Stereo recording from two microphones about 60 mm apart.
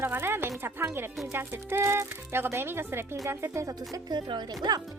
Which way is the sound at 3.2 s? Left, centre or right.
Right.